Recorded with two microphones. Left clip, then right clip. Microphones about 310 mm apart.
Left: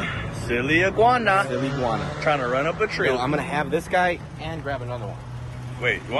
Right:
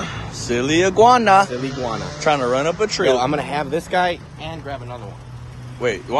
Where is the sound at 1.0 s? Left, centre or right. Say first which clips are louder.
Right 10 dB; centre.